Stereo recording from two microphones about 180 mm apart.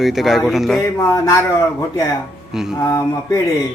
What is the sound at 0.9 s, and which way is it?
Speech, 20° left (ahead or behind).